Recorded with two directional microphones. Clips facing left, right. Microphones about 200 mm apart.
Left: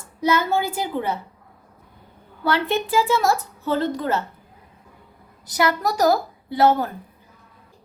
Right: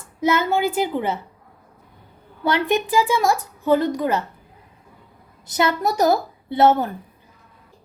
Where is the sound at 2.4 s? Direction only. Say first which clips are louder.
Right 2 dB; 15° right (ahead or behind).